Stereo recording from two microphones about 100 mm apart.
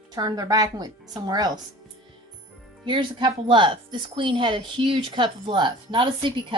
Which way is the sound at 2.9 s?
55° right (ahead or behind).